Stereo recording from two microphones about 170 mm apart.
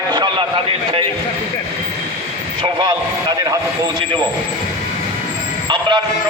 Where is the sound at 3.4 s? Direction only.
20° right (ahead or behind).